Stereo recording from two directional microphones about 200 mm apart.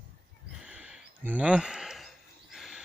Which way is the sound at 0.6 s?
5° right (ahead or behind).